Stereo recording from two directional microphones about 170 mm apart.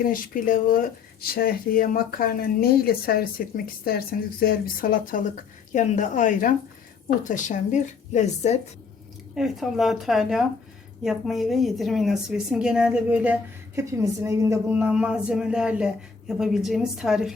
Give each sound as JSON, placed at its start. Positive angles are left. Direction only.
{"t": 0.0, "sound": "speech", "side_deg": 55}
{"t": 9.3, "sound": "a woman's voice", "side_deg": 0}